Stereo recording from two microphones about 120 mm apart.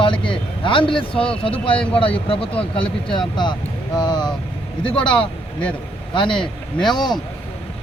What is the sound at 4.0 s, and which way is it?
Vehicle, 35° left (ahead or behind).